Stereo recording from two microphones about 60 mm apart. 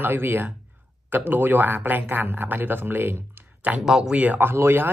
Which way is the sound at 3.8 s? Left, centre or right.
Centre.